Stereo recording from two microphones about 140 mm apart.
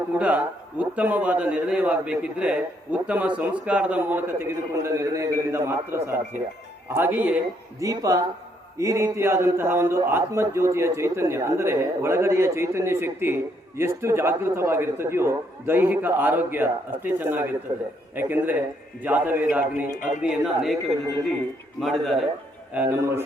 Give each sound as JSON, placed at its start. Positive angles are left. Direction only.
{"t": 0.2, "sound": "a man's voice", "side_deg": -10}
{"t": 7.8, "sound": "a man's voice", "side_deg": -25}
{"t": 22.7, "sound": "a man's voice", "side_deg": -15}